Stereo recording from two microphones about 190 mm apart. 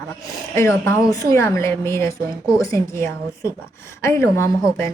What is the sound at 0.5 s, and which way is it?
A woman's voice, 15° left (ahead or behind).